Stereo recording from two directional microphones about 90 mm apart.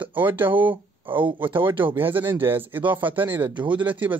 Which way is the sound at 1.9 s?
25° right (ahead or behind).